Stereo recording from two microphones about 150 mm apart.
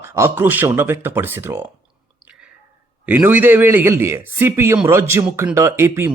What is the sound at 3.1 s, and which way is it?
Speech, 10° right (ahead or behind).